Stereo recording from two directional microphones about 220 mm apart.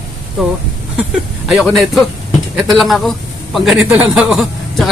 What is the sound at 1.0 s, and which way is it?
A man's voice, centre (ahead or behind).